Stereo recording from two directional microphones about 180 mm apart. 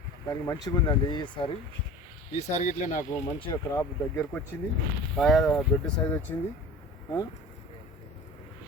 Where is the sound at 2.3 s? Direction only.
40° left (ahead or behind).